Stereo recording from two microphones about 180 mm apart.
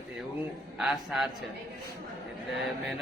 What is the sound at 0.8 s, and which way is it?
Speech, centre (ahead or behind).